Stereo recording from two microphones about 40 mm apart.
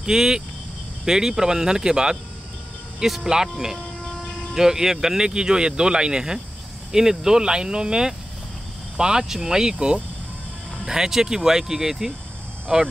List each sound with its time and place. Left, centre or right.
0.0 s speech: centre